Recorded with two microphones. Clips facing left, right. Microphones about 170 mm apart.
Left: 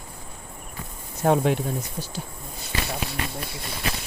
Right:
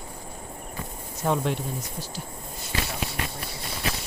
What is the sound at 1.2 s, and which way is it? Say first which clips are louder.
Speech: left 5 dB; 55° left (ahead or behind).